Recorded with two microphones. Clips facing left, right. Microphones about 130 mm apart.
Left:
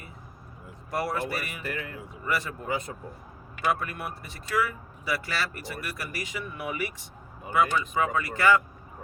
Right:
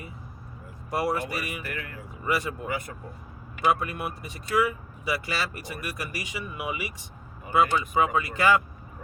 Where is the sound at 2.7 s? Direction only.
25° left (ahead or behind).